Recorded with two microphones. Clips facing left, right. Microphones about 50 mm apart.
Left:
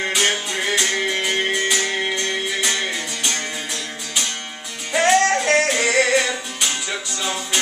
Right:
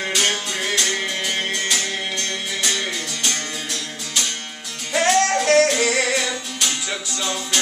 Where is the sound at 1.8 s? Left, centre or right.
Centre.